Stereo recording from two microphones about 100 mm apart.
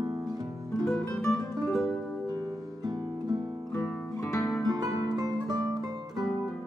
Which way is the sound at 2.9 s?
40° right (ahead or behind).